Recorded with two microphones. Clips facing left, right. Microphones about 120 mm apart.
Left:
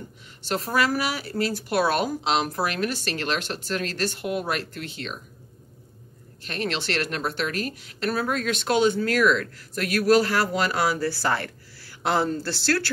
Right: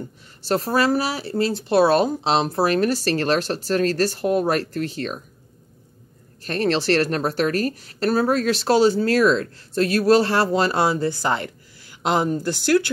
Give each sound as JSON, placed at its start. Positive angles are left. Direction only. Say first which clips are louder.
{"t": 0.5, "sound": "a woman's voice", "louder": "right 5 dB", "side_deg": -35}
{"t": 6.4, "sound": "a woman's voice", "louder": "right 8 dB", "side_deg": -40}